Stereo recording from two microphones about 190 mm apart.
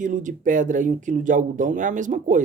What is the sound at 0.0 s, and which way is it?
Speech, 45° right (ahead or behind).